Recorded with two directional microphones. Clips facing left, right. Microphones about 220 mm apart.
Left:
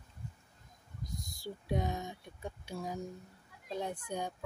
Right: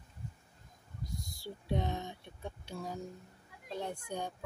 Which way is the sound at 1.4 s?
10° left (ahead or behind).